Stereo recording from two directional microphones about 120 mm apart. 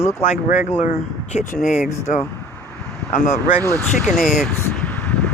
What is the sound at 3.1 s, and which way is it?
Speech, 90° left.